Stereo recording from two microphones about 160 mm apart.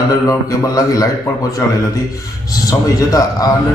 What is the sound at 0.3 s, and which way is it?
Speech, 20° left (ahead or behind).